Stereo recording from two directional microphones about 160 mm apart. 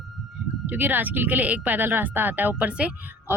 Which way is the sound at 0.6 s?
10° right (ahead or behind).